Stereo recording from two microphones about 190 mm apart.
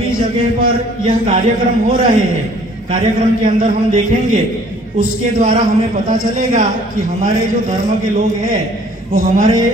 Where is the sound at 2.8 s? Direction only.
45° right (ahead or behind).